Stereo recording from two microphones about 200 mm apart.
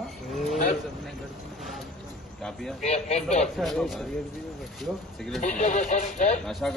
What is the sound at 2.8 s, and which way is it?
Speech, 35° left (ahead or behind).